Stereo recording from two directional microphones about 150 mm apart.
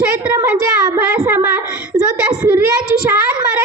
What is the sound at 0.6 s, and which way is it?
A child's voice, 15° right (ahead or behind).